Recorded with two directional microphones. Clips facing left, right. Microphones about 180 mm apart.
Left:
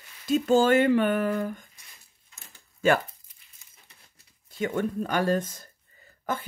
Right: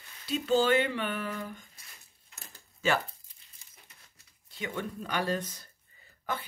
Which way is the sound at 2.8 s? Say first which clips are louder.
Left 6 dB; 50° left (ahead or behind).